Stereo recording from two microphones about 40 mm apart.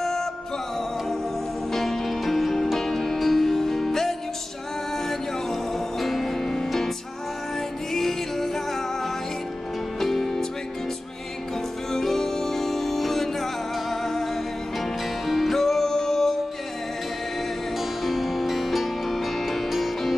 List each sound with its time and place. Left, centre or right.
0.0 s music: centre
1.7 s music: centre
7.9 s music: centre
11.9 s music: centre
17.7 s music: centre